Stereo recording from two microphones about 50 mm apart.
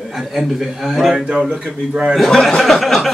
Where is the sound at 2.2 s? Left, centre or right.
Centre.